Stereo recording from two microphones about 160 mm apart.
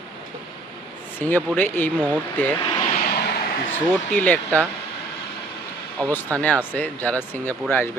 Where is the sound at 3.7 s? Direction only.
10° left (ahead or behind).